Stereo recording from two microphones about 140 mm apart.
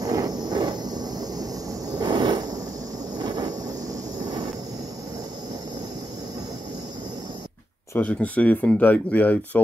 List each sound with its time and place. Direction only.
0.0 s a sound: 25° right (ahead or behind)
4.2 s vehicle: 30° right (ahead or behind)
7.9 s speech: 10° left (ahead or behind)